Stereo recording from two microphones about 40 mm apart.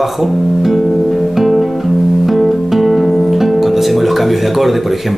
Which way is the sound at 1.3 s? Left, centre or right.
Centre.